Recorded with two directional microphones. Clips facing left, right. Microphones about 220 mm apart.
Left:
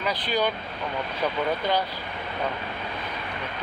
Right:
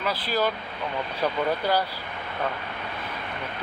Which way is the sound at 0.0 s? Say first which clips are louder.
Even; 5° right (ahead or behind).